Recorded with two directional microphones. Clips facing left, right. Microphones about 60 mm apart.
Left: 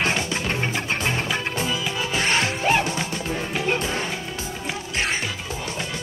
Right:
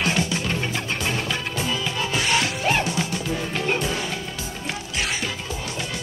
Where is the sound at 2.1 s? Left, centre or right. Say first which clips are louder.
Left 1 dB; left.